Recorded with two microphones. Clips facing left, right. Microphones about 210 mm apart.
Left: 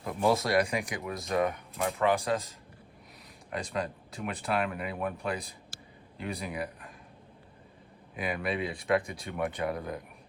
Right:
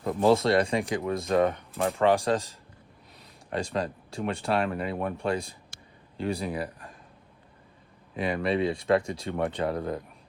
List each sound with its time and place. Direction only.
0.0 s speech: 30° right (ahead or behind)
8.1 s speech: 30° right (ahead or behind)